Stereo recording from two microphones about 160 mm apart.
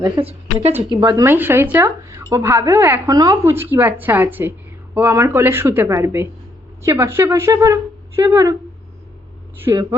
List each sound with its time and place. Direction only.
0.2 s a woman's voice: 40° right (ahead or behind)
0.9 s a woman's voice: 25° right (ahead or behind)
9.7 s a woman's voice: 20° right (ahead or behind)